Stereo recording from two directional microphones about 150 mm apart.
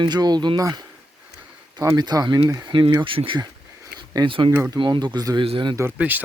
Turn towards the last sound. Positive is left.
turn(degrees=-10)  # may be behind; listen again after turning